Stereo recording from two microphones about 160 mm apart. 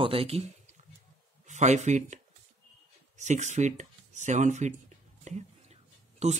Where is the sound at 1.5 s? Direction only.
45° right (ahead or behind).